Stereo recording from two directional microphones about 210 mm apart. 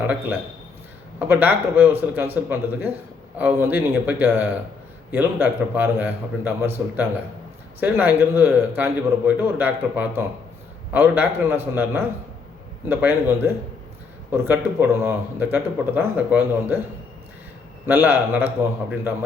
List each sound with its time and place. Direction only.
0.0 s a man's voice: 5° right (ahead or behind)
17.8 s a man's voice: 10° right (ahead or behind)